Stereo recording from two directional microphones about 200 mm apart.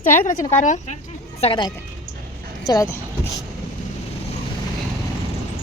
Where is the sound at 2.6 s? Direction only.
15° left (ahead or behind).